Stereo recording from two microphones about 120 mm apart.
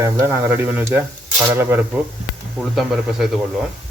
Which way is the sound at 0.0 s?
20° right (ahead or behind).